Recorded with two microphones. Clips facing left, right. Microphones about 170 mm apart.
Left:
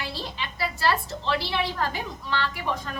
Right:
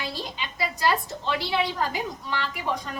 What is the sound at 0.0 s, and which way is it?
A woman's voice, 15° right (ahead or behind).